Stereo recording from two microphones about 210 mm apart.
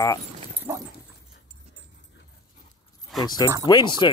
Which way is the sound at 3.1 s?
Centre (ahead or behind).